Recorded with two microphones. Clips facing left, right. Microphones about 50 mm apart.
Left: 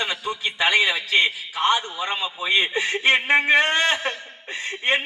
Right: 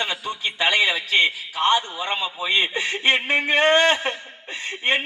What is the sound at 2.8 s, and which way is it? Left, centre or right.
Speech, left.